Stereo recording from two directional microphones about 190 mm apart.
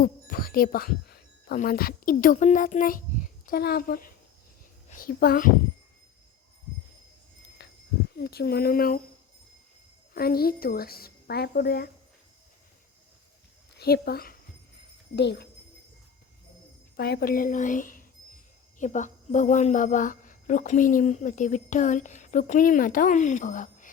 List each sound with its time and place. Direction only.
0.0 s a woman's voice: 50° left (ahead or behind)
7.6 s a sound: 60° left (ahead or behind)
8.1 s speech: 55° left (ahead or behind)
10.2 s a woman's voice: 50° left (ahead or behind)
13.7 s speech: 55° left (ahead or behind)
17.0 s a woman's voice: 55° left (ahead or behind)